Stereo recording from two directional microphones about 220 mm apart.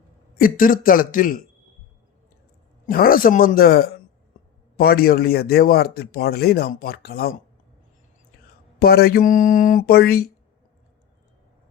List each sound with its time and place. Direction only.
0.3 s speech: 40° left (ahead or behind)
2.8 s speech: 40° left (ahead or behind)
8.8 s speech: 45° left (ahead or behind)